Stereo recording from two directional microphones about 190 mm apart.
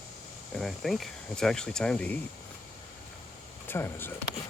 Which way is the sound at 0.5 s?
Centre (ahead or behind).